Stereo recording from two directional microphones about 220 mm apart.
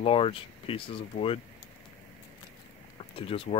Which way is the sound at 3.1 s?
25° left (ahead or behind).